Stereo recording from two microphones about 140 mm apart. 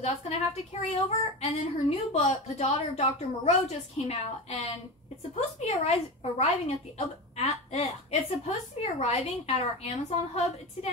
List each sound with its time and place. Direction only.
0.0 s a woman's voice: 50° left (ahead or behind)